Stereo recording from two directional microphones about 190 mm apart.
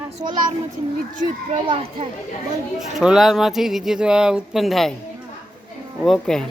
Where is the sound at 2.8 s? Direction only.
Centre (ahead or behind).